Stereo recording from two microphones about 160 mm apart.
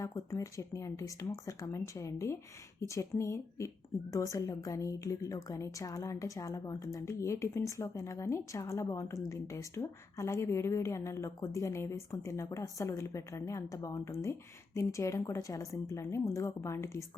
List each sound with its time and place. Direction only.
0.0 s a woman's voice: 20° left (ahead or behind)